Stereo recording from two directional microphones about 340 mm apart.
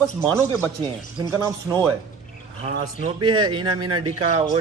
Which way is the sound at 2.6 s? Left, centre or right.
Centre.